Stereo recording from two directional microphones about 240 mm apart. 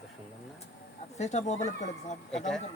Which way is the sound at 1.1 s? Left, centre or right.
Left.